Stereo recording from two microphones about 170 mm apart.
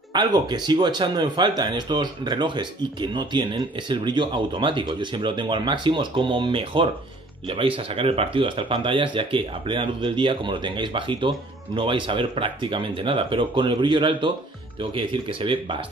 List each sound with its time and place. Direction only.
0.1 s speech: 25° right (ahead or behind)